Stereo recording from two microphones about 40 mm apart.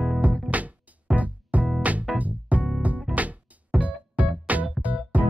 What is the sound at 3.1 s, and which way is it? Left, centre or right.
Music, centre.